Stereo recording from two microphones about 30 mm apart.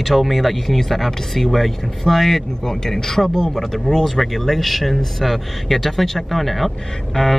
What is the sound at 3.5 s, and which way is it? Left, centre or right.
Speech, centre.